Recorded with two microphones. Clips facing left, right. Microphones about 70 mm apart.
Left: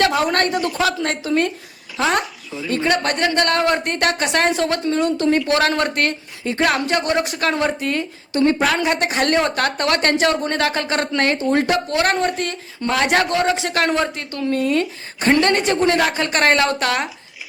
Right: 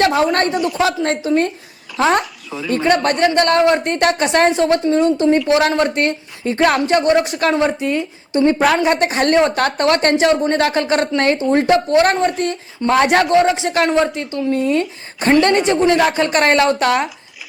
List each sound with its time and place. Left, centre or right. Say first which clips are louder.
0.0 s a woman's voice: right 3 dB; right
7.5 s a woman's voice: right 4 dB; centre